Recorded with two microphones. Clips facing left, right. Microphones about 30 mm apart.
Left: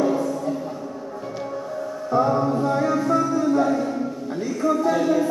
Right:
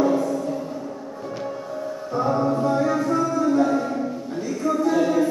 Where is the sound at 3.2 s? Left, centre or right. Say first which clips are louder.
Even; centre.